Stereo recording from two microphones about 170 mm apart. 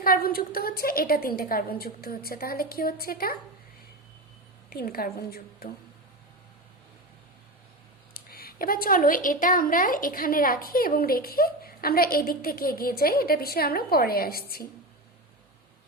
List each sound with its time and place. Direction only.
0.0 s speech: 60° left (ahead or behind)
4.7 s speech: 60° left (ahead or behind)
8.1 s speech: 60° left (ahead or behind)